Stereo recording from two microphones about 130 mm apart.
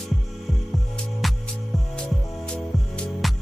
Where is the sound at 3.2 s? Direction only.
Centre (ahead or behind).